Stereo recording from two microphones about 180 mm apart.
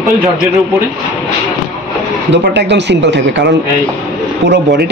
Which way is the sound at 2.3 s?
75° right (ahead or behind).